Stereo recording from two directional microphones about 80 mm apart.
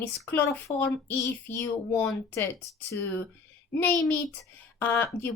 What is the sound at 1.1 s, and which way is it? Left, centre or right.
Child singing, left.